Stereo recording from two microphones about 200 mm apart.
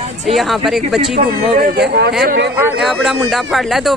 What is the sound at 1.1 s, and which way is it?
Speech, 45° right (ahead or behind).